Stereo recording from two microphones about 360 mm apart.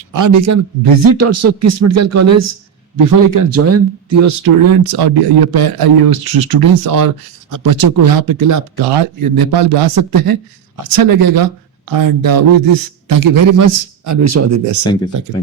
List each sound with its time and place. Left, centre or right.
0.1 s speech: right
3.1 s a man's voice: right
3.5 s speech: right
4.7 s speech: right
8.7 s a man's voice: right